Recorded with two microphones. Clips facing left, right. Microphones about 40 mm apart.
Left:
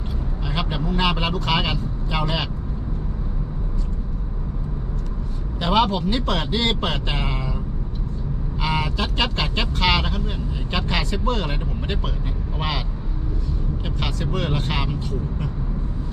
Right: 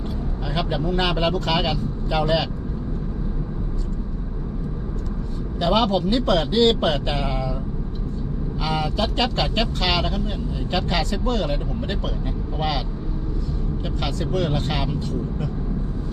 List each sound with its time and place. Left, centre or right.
0.5 s speech: centre
5.5 s speech: centre
8.6 s speech: left
14.0 s speech: centre